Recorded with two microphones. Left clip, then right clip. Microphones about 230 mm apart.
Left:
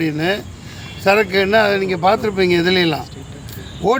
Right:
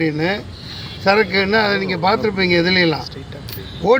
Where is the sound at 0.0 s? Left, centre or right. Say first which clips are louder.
Even; centre.